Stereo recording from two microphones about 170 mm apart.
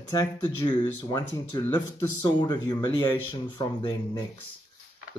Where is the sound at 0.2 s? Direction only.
20° left (ahead or behind).